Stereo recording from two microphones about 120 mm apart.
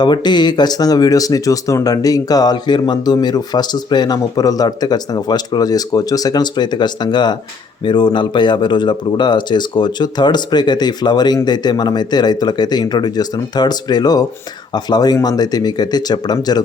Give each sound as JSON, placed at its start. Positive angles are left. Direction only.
{"t": 0.0, "sound": "speech", "side_deg": 40}